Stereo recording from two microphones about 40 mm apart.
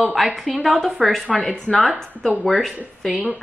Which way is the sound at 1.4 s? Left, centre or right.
Left.